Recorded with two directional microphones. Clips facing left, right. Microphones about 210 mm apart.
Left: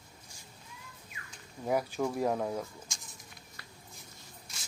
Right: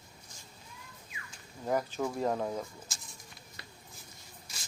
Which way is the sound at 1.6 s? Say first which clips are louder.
Left 1 dB; 10° left (ahead or behind).